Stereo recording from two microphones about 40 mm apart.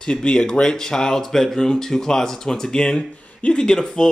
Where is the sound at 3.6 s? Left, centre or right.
Centre.